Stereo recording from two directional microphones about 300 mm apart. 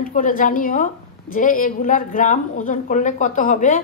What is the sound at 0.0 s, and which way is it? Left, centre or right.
A woman's voice, left.